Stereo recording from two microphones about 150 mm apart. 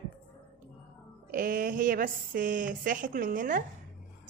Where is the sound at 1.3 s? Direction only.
65° right (ahead or behind).